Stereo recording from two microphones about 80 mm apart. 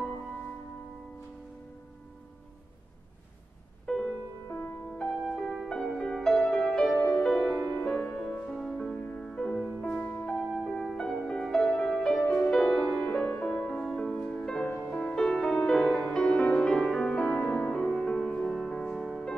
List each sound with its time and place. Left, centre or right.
3.8 s music: centre
8.8 s music: centre
9.2 s music: centre
9.5 s music: centre
17.4 s music: left
17.7 s music: centre